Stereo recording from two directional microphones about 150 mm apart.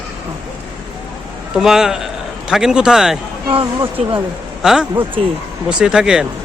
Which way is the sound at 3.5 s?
35° right (ahead or behind).